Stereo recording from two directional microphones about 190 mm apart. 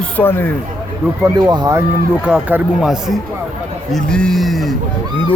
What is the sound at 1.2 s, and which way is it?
Speech, 20° right (ahead or behind).